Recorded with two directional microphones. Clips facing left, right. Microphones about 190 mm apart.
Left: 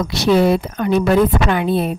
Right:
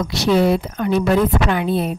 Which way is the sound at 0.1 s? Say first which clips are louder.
Left 2 dB; 60° left (ahead or behind).